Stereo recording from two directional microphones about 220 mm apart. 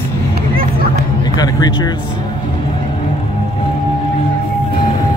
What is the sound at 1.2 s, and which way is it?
Speech, 20° left (ahead or behind).